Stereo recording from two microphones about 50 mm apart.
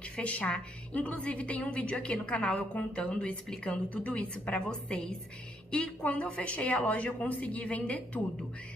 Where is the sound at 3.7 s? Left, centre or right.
Left.